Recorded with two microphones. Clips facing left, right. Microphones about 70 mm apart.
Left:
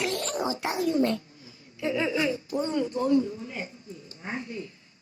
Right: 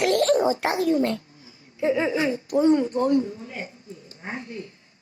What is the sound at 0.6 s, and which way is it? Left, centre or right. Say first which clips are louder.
Speech: right 4 dB; right.